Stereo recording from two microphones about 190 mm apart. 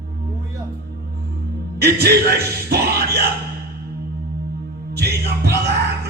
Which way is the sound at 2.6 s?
55° right (ahead or behind).